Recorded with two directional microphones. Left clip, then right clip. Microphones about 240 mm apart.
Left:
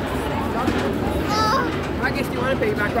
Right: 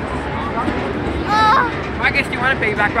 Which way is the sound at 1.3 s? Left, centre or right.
Centre.